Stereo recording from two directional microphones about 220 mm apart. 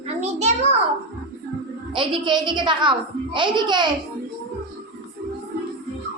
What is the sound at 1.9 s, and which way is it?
A woman's voice, 20° right (ahead or behind).